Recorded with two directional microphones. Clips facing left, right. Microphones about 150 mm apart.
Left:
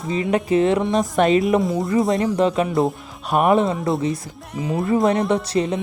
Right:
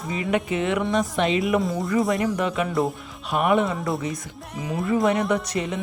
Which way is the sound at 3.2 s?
45° left (ahead or behind).